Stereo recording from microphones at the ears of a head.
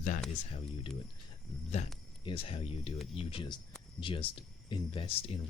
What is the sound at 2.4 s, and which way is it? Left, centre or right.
Speech, left.